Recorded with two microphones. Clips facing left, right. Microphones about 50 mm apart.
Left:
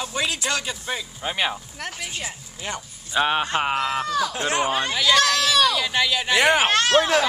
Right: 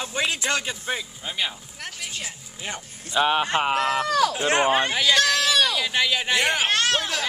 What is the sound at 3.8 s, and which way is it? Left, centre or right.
Speech, right.